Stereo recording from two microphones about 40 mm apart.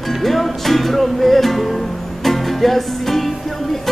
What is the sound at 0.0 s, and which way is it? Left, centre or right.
Music, centre.